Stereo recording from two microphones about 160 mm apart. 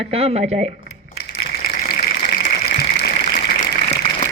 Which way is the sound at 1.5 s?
75° left (ahead or behind).